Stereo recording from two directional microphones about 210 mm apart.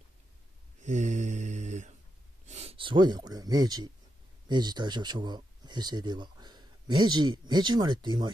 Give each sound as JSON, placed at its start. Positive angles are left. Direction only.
{"t": 0.7, "sound": "mantra", "side_deg": -35}
{"t": 2.4, "sound": "speech", "side_deg": -30}